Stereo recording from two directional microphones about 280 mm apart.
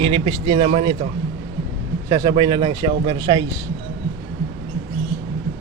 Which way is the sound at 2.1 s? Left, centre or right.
Centre.